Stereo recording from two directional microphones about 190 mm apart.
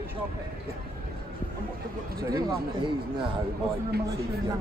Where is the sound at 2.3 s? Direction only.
20° right (ahead or behind).